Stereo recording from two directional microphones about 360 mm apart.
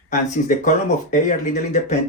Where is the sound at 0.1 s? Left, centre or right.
Left.